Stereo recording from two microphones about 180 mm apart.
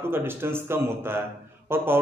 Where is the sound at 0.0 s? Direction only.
10° right (ahead or behind).